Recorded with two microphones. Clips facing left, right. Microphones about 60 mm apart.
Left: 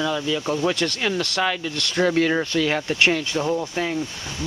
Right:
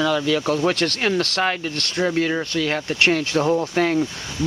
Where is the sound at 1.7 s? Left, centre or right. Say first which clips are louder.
Even; right.